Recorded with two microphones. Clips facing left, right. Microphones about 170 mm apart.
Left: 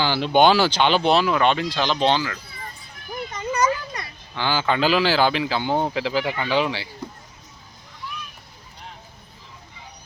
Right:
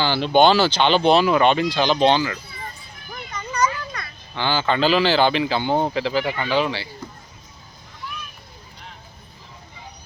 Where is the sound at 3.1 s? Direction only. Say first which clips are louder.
Left 5 dB; 25° left (ahead or behind).